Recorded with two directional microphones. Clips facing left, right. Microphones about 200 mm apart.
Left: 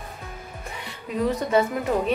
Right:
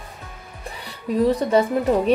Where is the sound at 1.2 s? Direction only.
35° right (ahead or behind).